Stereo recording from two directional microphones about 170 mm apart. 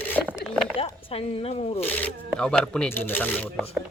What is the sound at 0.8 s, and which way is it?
Speech, 35° left (ahead or behind).